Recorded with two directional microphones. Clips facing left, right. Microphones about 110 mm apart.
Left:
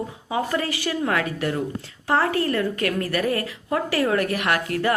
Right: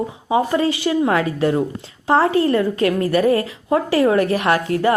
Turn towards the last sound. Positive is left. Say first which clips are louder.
# right 5 dB
turn(degrees=-25)  # may be behind; listen again after turning